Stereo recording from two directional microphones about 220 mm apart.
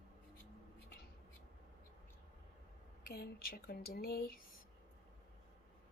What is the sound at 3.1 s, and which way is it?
Speech, 40° left (ahead or behind).